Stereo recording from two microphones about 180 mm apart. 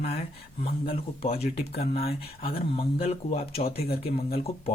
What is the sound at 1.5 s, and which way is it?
Speech, 60° left (ahead or behind).